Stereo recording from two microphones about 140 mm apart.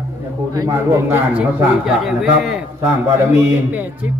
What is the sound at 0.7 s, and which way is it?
Speech, 15° right (ahead or behind).